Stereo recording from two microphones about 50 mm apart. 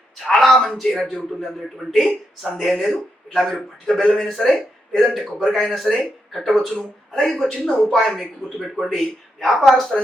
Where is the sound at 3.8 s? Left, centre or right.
Centre.